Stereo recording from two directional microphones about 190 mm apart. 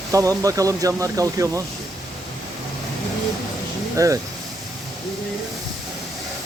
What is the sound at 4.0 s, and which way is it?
Speech, 15° right (ahead or behind).